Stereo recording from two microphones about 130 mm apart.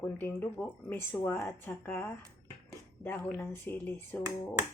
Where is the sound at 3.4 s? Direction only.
15° left (ahead or behind).